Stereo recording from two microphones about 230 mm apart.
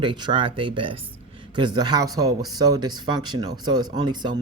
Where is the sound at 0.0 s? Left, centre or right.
Right.